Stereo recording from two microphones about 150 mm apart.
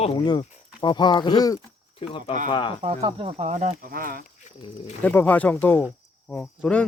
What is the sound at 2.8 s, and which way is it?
Speech, 45° right (ahead or behind).